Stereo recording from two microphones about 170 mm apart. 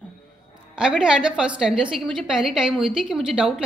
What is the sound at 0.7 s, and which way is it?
A woman's voice, 5° right (ahead or behind).